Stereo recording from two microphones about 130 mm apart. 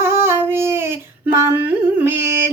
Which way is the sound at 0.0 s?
20° right (ahead or behind).